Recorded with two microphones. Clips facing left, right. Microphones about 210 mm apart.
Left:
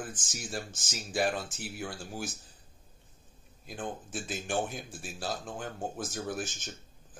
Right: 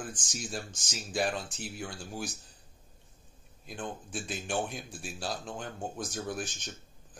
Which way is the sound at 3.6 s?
Centre (ahead or behind).